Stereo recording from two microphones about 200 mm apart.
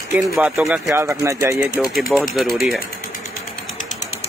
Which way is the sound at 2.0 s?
Centre (ahead or behind).